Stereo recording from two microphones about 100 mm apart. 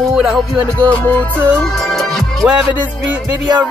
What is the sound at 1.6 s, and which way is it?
Music, 5° left (ahead or behind).